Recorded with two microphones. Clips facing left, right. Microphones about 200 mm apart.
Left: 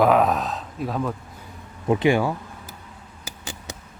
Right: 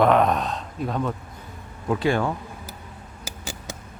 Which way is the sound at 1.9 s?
20° left (ahead or behind).